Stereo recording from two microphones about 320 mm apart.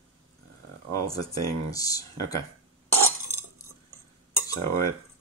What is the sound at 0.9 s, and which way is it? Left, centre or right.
Speech, centre.